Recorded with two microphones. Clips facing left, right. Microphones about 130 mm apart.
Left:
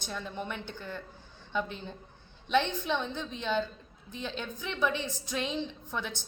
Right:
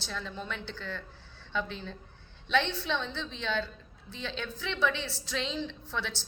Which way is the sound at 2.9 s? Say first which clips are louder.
Left 1 dB; 15° left (ahead or behind).